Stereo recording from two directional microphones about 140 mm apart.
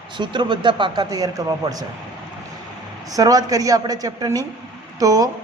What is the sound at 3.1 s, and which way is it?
A man's voice, 25° right (ahead or behind).